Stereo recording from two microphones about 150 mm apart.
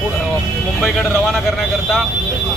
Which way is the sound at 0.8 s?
Centre (ahead or behind).